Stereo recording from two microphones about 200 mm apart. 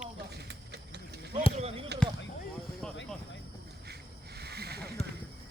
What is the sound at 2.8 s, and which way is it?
Vehicle, 5° left (ahead or behind).